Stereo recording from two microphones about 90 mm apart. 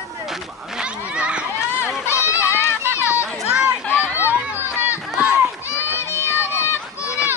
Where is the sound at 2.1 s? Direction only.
30° left (ahead or behind).